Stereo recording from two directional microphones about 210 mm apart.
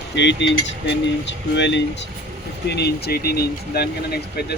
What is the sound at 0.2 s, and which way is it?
Speech, 55° left (ahead or behind).